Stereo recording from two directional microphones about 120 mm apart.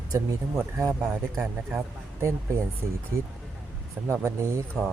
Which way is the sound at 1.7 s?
20° right (ahead or behind).